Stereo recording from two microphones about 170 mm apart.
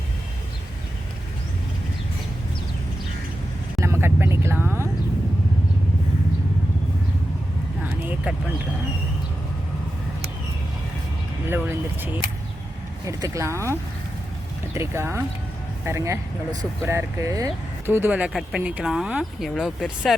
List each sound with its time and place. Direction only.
3.8 s vehicle: 15° right (ahead or behind)
7.9 s vehicle: 10° right (ahead or behind)
11.4 s a sound: 10° right (ahead or behind)
13.1 s speech: 20° right (ahead or behind); by 20.1 s centre (ahead or behind)